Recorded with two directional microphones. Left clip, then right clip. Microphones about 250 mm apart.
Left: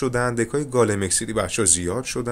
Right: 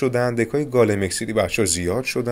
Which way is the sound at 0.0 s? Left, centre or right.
Centre.